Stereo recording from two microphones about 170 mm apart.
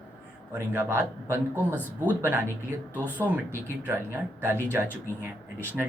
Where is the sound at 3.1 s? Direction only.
10° right (ahead or behind).